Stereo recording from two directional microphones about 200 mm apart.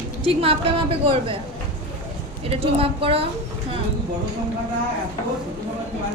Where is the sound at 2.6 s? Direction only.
30° right (ahead or behind).